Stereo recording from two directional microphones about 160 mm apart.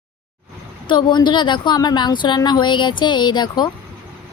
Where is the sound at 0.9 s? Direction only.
30° left (ahead or behind).